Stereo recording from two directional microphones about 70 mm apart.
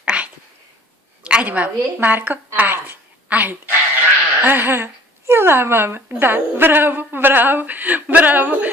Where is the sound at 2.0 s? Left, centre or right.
Right.